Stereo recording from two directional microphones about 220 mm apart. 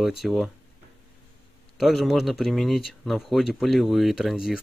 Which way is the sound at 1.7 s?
Centre (ahead or behind).